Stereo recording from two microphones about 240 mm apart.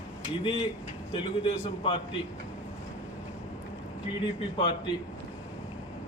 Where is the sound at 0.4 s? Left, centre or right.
Left.